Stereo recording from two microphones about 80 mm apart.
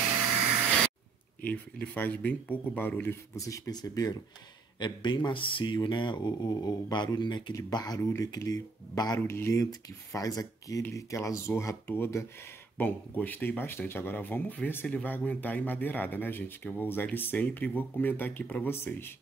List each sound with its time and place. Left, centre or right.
1.4 s a man's voice: left
3.3 s speech: left
4.7 s speech: left
7.7 s speech: left
8.0 s speech: left
8.5 s speech: left
9.3 s speech: left
12.7 s a man's voice: left